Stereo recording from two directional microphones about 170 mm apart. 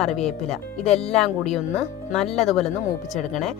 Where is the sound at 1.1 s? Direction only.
Centre (ahead or behind).